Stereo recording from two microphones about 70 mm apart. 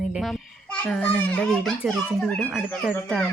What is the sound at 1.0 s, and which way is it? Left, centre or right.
Speech, left.